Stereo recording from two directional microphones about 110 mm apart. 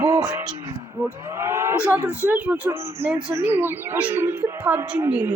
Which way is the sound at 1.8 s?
15° right (ahead or behind).